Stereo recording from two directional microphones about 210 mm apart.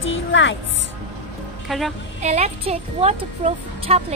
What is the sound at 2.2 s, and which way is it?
Speech, 30° right (ahead or behind).